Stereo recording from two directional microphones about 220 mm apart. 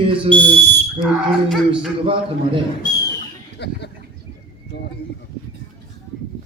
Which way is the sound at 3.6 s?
50° left (ahead or behind).